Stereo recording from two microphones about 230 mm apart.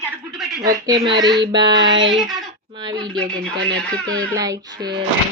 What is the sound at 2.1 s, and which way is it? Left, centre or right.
Speech, centre.